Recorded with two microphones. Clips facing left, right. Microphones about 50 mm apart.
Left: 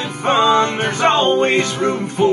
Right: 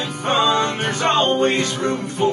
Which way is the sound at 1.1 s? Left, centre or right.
Centre.